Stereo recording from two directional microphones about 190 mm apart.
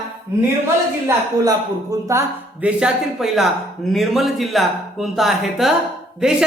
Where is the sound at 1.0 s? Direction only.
20° right (ahead or behind).